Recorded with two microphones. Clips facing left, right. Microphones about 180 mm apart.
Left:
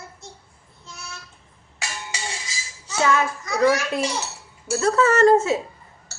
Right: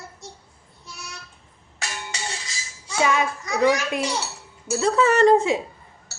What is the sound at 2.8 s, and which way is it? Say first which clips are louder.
A child's voice: left 1 dB; 10° right (ahead or behind).